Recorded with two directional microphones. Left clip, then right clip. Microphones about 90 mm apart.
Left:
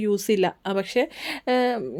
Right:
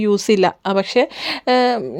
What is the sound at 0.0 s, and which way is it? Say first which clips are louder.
Speech: right 7 dB; 40° right (ahead or behind).